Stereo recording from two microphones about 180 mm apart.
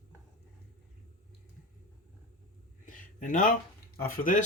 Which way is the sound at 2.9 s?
45° left (ahead or behind).